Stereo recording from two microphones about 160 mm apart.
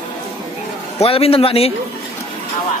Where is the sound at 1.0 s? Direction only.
35° left (ahead or behind).